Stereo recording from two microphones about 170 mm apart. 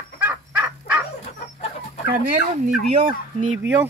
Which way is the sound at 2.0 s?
55° right (ahead or behind).